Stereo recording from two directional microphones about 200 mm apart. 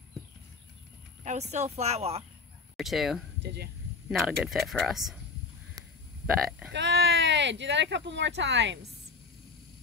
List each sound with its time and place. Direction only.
1.2 s speech: 35° right (ahead or behind)
2.8 s speech: centre (ahead or behind)
3.4 s speech: 55° right (ahead or behind)
4.1 s speech: centre (ahead or behind)
6.7 s speech: 60° right (ahead or behind)